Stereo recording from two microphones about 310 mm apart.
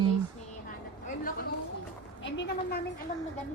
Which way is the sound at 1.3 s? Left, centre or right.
Left.